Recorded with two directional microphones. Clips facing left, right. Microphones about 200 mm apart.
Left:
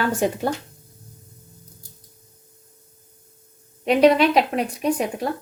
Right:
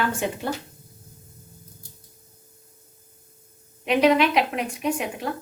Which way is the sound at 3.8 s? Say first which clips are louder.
Left 3 dB; 35° left (ahead or behind).